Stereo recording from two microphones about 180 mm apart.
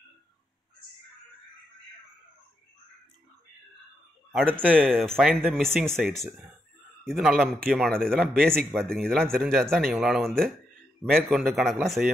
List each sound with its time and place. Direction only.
4.3 s speech: 5° right (ahead or behind)
5.3 s speech: 10° right (ahead or behind)
5.6 s speech: 5° left (ahead or behind)